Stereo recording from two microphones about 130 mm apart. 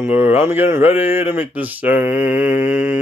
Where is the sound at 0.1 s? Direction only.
15° right (ahead or behind).